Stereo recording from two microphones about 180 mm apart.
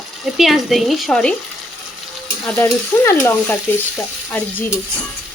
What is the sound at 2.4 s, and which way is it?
Speech, 10° left (ahead or behind).